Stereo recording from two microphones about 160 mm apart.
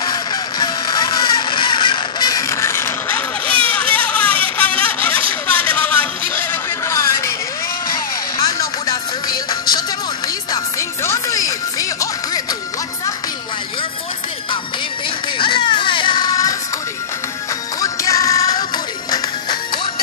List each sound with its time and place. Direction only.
0.0 s a sound: 25° left (ahead or behind)
8.8 s music: 25° left (ahead or behind)
15.3 s music: 30° left (ahead or behind)
17.7 s music: 20° left (ahead or behind)